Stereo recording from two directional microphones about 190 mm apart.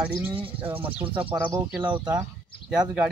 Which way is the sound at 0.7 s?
10° right (ahead or behind).